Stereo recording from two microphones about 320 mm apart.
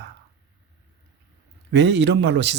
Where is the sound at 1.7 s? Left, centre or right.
Right.